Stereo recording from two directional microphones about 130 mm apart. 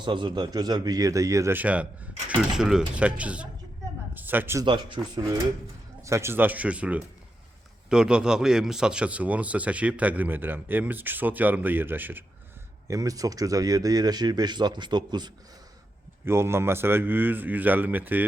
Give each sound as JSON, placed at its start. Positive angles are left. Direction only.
{"t": 0.0, "sound": "a man's voice", "side_deg": -40}
{"t": 4.6, "sound": "speech", "side_deg": -40}
{"t": 5.2, "sound": "a man's voice", "side_deg": -25}
{"t": 12.9, "sound": "speech", "side_deg": -25}
{"t": 16.2, "sound": "speech", "side_deg": -20}